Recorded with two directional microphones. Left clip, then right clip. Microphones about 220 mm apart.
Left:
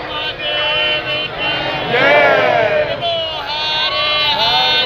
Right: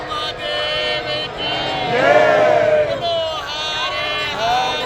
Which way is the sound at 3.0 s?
50° right (ahead or behind).